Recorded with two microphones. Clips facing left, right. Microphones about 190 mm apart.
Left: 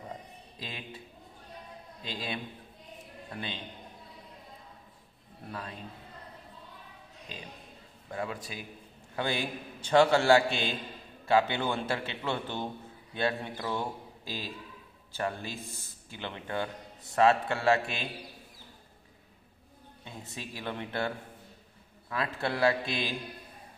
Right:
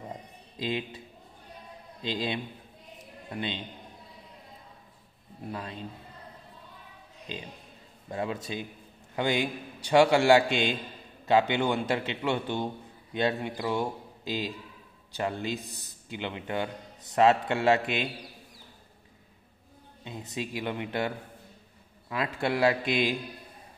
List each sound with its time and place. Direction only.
0.6 s speech: 25° right (ahead or behind)
2.0 s a man's voice: 20° right (ahead or behind)
5.5 s a man's voice: 25° right (ahead or behind)
8.1 s a man's voice: 25° right (ahead or behind)
20.1 s a man's voice: 15° right (ahead or behind)
22.1 s a man's voice: 15° right (ahead or behind)